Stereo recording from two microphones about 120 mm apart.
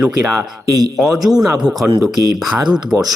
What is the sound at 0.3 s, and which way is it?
A man's voice, centre (ahead or behind).